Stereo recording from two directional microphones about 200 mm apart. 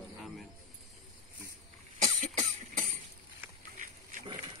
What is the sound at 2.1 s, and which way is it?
Cough, 35° right (ahead or behind).